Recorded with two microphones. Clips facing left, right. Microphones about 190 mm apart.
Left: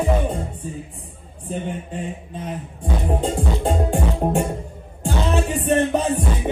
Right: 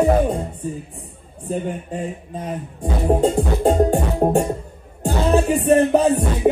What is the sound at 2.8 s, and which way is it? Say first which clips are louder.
Music: right 5 dB; 60° right (ahead or behind).